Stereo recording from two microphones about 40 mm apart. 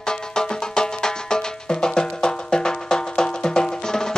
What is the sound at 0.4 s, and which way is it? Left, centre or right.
Music, centre.